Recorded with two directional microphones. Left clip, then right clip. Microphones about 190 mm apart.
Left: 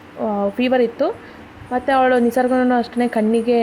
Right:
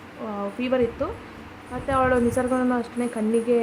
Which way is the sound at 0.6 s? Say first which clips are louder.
Left 6 dB; 25° left (ahead or behind).